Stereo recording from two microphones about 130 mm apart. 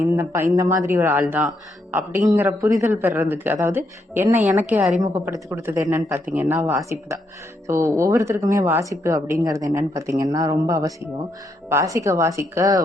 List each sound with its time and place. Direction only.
0.2 s a man's voice: 20° right (ahead or behind)